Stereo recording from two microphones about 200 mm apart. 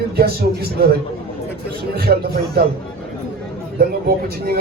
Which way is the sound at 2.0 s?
50° right (ahead or behind).